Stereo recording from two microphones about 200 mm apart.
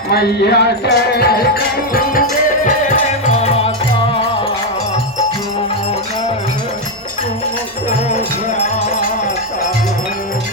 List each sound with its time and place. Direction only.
0.1 s music: 55° left (ahead or behind)
2.6 s music: 40° left (ahead or behind)